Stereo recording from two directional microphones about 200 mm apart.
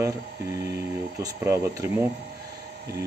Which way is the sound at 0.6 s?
55° right (ahead or behind).